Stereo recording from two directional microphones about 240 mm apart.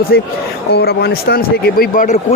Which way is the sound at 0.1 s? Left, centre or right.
Left.